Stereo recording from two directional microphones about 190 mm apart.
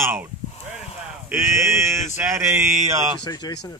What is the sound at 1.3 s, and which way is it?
Speech, 15° right (ahead or behind).